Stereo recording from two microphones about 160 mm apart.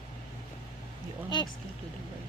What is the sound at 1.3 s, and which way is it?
Speech, 25° left (ahead or behind).